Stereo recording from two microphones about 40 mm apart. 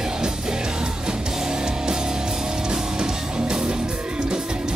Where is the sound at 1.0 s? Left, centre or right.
Centre.